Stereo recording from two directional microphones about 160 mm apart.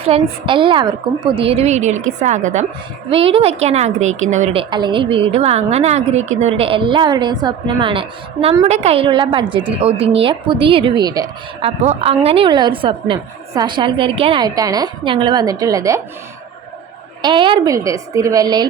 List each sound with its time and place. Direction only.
0.0 s a woman's voice: 35° right (ahead or behind)
3.1 s a woman's voice: 35° right (ahead or behind)
4.5 s a woman's voice: 30° right (ahead or behind)
11.6 s a woman's voice: 40° right (ahead or behind); by 16.0 s 20° right (ahead or behind)
17.2 s a woman's voice: 30° right (ahead or behind)
17.7 s a woman's voice: 20° right (ahead or behind)